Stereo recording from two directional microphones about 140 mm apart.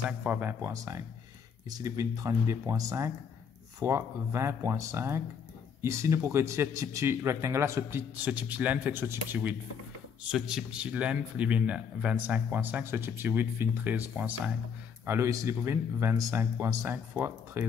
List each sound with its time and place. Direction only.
0.2 s speech: 10° right (ahead or behind)